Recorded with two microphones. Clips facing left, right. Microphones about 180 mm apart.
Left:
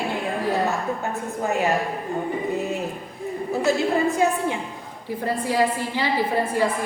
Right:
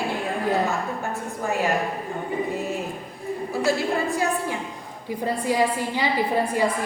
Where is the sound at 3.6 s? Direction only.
20° left (ahead or behind).